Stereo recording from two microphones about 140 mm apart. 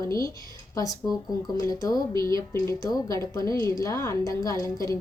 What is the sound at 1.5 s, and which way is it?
A woman's voice, 25° left (ahead or behind).